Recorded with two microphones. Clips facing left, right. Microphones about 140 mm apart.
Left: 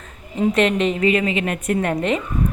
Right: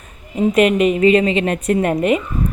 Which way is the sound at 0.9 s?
25° right (ahead or behind).